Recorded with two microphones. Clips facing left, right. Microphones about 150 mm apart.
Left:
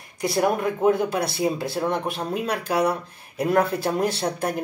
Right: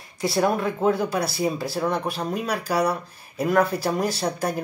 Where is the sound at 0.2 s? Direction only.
20° left (ahead or behind).